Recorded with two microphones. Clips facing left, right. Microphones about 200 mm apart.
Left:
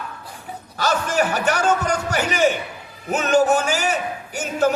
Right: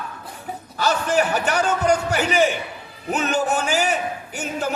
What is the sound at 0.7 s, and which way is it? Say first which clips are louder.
Speech: right 1 dB; 40° left (ahead or behind).